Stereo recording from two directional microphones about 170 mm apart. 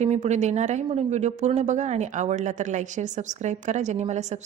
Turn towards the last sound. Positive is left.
turn(degrees=-40)  # may be behind; listen again after turning